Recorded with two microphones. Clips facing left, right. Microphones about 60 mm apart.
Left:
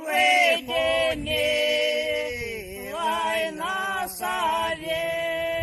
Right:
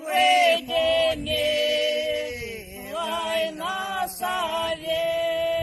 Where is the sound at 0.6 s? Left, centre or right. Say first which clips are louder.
Right 2 dB; centre.